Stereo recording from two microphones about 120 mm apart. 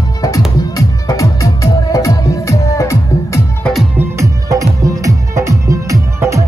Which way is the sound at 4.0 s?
25° right (ahead or behind).